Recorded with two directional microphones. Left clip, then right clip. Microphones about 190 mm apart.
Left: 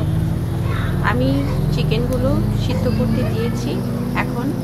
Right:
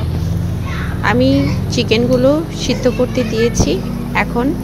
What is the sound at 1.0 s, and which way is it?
A woman's voice, 40° right (ahead or behind).